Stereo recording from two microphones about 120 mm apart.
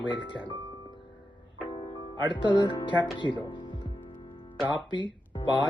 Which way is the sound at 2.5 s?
35° left (ahead or behind).